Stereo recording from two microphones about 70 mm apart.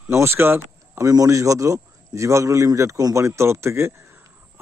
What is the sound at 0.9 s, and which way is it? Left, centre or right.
A man's voice, right.